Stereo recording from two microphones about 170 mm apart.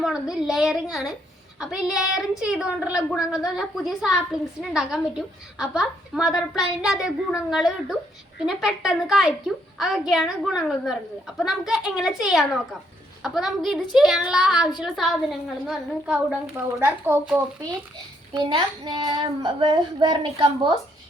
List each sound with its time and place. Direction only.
0.0 s a woman's voice: 5° right (ahead or behind)
18.3 s a child's voice: 30° right (ahead or behind)